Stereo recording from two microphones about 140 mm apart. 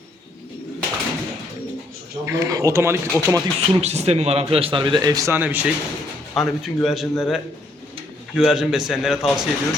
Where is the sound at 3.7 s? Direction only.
50° right (ahead or behind); by 5.6 s 15° right (ahead or behind).